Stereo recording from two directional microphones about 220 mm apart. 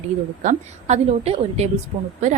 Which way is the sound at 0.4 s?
30° right (ahead or behind).